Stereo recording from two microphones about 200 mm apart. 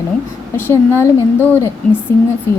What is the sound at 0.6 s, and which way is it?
A woman's voice, 10° left (ahead or behind).